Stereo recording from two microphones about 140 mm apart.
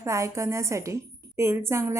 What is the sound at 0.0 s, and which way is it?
A woman's voice, 20° right (ahead or behind).